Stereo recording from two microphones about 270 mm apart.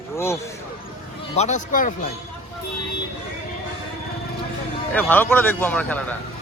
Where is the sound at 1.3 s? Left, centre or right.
Left.